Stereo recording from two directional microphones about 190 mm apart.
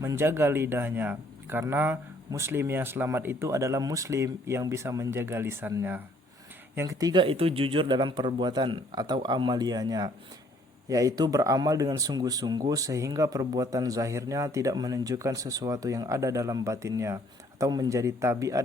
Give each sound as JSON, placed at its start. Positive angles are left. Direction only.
{"t": 0.0, "sound": "speech", "side_deg": -15}